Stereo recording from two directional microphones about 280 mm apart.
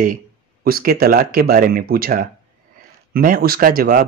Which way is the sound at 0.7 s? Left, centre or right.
Right.